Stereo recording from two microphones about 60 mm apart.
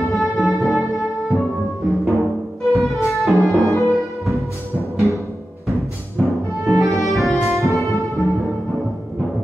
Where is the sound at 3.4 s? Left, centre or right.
Right.